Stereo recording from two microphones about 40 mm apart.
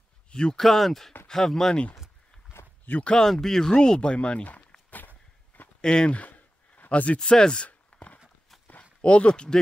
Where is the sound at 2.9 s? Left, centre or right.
Left.